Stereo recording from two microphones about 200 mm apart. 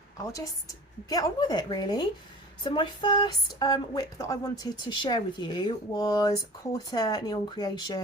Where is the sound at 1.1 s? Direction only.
20° left (ahead or behind).